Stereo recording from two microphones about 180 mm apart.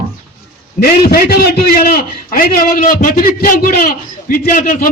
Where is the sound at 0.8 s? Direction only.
55° left (ahead or behind).